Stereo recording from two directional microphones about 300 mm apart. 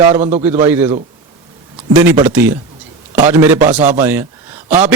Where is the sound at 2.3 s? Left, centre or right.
Centre.